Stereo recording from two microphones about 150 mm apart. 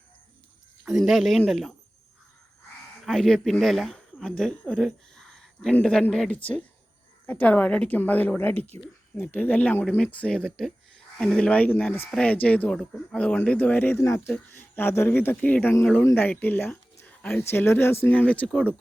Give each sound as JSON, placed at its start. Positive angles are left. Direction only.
{"t": 0.9, "sound": "speech", "side_deg": 0}
{"t": 3.0, "sound": "speech", "side_deg": 0}